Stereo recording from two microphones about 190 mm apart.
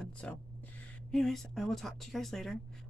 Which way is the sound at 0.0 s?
5° left (ahead or behind).